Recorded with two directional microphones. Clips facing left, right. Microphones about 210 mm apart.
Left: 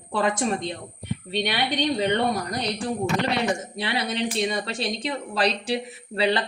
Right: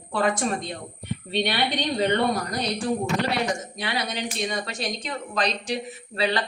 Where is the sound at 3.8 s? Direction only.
30° left (ahead or behind).